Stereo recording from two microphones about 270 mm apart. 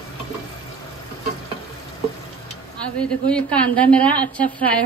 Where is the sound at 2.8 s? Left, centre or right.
Centre.